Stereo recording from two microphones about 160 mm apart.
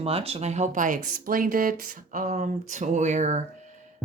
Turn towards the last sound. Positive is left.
turn(degrees=-50)  # may be behind; listen again after turning